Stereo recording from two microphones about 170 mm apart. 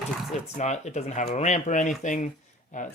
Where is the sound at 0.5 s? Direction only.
45° left (ahead or behind).